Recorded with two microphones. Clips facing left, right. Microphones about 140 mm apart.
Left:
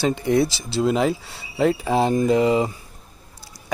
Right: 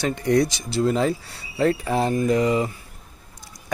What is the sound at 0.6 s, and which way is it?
Speech, 20° left (ahead or behind).